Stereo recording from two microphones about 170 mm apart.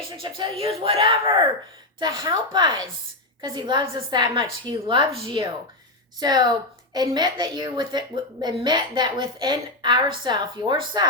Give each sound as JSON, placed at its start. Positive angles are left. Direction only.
{"t": 0.2, "sound": "a woman's voice", "side_deg": -30}